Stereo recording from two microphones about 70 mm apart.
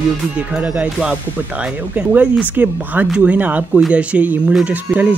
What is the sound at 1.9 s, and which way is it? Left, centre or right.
Speech, right.